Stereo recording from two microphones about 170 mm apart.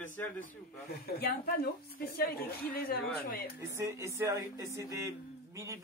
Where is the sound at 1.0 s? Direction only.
65° left (ahead or behind).